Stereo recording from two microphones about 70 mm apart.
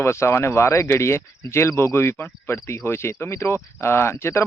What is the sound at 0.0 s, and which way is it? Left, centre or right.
Speech, left.